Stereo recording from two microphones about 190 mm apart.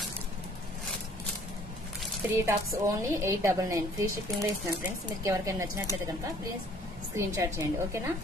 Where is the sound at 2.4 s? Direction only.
15° right (ahead or behind).